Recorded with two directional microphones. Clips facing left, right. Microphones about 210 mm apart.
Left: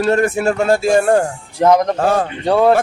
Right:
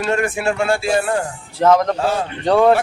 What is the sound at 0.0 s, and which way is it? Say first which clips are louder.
Speech: left 5 dB; 40° left (ahead or behind).